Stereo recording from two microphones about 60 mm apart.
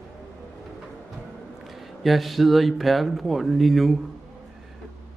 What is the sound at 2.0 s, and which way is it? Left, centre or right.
Speech, centre.